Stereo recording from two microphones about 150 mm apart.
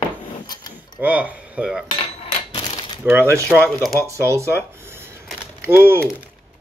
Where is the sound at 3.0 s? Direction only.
15° right (ahead or behind).